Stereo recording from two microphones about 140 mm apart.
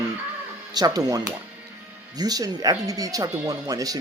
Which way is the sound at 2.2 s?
25° right (ahead or behind).